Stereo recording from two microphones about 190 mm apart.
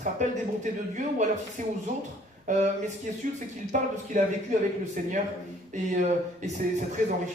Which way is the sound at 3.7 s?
45° right (ahead or behind).